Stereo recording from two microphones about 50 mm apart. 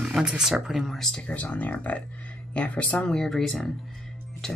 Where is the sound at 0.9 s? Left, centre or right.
Centre.